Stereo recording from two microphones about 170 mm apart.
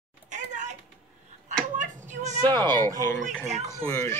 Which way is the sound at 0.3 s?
45° right (ahead or behind).